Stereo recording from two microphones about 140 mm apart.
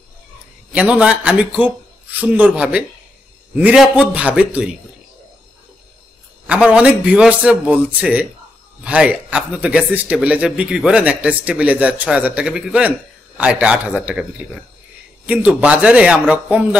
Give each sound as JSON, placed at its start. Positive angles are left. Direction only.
{"t": 0.7, "sound": "speech", "side_deg": -10}
{"t": 6.4, "sound": "speech", "side_deg": -5}
{"t": 15.2, "sound": "speech", "side_deg": -10}